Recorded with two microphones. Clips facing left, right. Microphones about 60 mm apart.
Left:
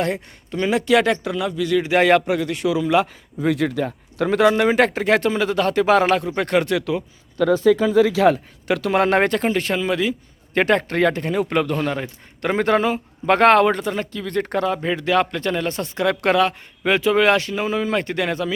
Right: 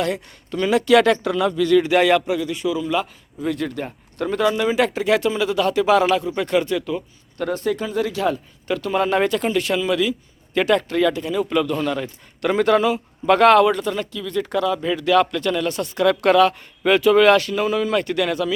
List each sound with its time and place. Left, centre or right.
0.5 s speech: centre
1.9 s speech: left
2.1 s speech: left
7.7 s speech: left
9.4 s speech: left
11.9 s speech: left
14.1 s speech: left